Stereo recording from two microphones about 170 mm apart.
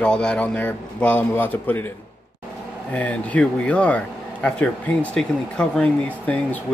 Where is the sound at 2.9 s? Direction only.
10° left (ahead or behind).